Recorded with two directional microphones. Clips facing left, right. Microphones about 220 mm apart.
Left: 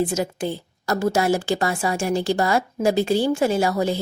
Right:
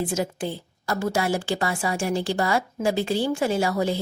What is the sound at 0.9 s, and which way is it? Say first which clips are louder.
A woman's voice: left 4 dB; 40° left (ahead or behind).